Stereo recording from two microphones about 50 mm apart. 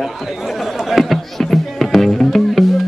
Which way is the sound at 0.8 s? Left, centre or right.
Centre.